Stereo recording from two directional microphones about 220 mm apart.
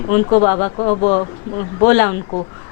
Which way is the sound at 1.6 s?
15° left (ahead or behind).